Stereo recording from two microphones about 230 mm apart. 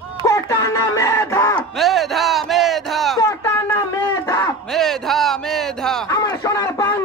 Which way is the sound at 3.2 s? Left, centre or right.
Centre.